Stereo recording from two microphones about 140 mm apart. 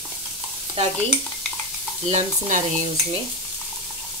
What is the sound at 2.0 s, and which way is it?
Speech, 55° right (ahead or behind).